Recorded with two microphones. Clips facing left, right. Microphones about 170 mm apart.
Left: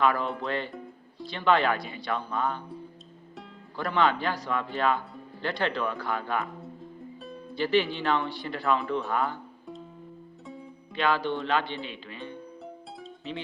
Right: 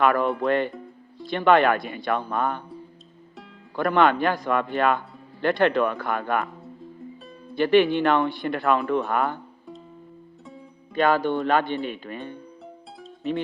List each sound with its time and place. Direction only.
0.0 s speech: 55° right (ahead or behind)
3.8 s speech: 55° right (ahead or behind)
7.5 s speech: 60° right (ahead or behind)
10.9 s speech: 45° right (ahead or behind)
12.6 s music: centre (ahead or behind)